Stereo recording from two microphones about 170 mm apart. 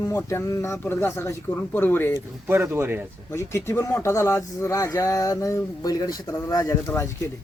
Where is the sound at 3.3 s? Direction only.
15° left (ahead or behind).